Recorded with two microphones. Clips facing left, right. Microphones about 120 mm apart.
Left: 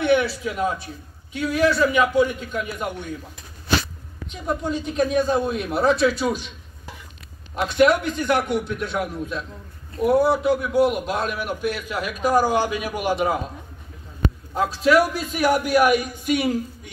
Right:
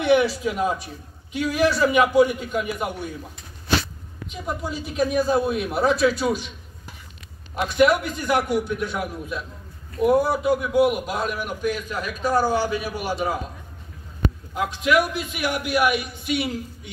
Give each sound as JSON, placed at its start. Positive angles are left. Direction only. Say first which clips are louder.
{"t": 0.0, "sound": "a man's voice", "louder": "right 1 dB", "side_deg": -15}
{"t": 4.3, "sound": "speech", "louder": "left 4 dB", "side_deg": -5}
{"t": 7.5, "sound": "a man's voice", "louder": "left 1 dB", "side_deg": 0}
{"t": 14.5, "sound": "a man's voice", "louder": "left 3 dB", "side_deg": 35}